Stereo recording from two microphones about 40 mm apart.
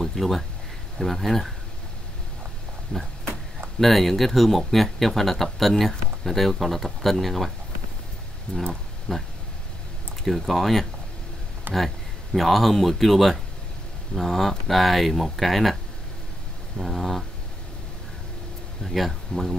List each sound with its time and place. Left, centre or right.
0.0 s a sound: centre
0.9 s speech: centre
2.9 s speech: left
3.8 s speech: centre
9.1 s speech: centre
11.7 s speech: right
12.4 s speech: centre
18.9 s speech: centre